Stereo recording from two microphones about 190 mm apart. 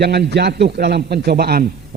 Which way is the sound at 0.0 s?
60° right (ahead or behind).